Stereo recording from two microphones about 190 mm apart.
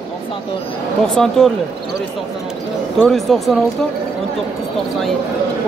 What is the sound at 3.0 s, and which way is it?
Speech, centre (ahead or behind).